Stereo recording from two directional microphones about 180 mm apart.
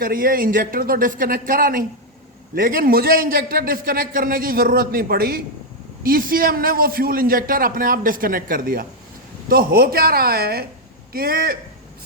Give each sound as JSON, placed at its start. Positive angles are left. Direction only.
{"t": 0.0, "sound": "a man's voice", "side_deg": -50}